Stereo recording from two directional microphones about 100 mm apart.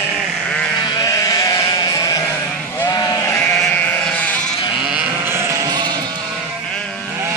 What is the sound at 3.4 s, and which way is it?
Sheep, 10° left (ahead or behind).